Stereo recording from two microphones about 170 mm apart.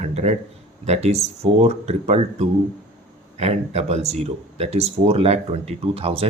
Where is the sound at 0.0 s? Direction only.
40° right (ahead or behind).